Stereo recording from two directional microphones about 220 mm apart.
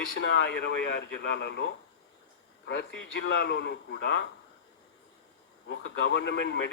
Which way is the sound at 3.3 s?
50° left (ahead or behind).